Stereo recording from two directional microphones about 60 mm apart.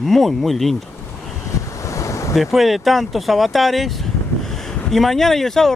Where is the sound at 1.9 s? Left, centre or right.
Left.